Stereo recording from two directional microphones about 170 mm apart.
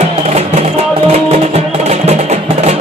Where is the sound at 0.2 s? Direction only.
40° right (ahead or behind).